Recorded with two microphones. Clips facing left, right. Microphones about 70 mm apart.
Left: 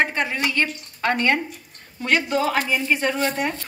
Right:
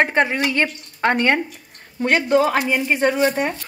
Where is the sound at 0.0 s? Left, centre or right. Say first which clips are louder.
Right 4 dB; right.